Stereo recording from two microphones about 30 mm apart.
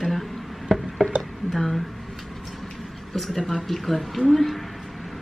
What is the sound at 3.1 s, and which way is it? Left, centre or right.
Speech, centre.